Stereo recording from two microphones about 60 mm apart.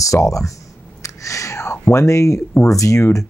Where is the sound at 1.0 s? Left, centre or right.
Left.